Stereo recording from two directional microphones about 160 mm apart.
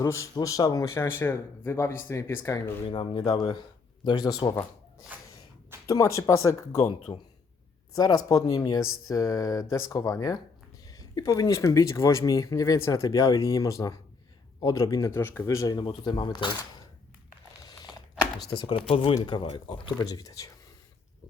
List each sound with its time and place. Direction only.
0.0 s speech: 20° left (ahead or behind)
2.8 s speech: 30° left (ahead or behind)
5.1 s a sound: 10° right (ahead or behind)
5.8 s speech: 20° left (ahead or behind)
18.6 s speech: 30° left (ahead or behind)